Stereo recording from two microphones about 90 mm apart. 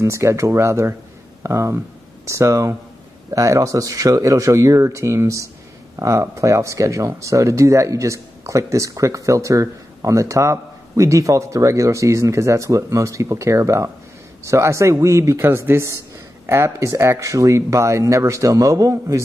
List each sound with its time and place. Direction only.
0.0 s speech: 35° right (ahead or behind)